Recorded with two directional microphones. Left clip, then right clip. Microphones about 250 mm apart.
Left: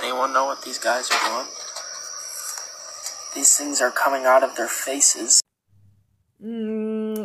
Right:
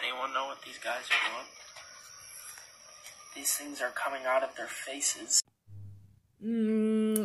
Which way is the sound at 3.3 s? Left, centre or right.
Left.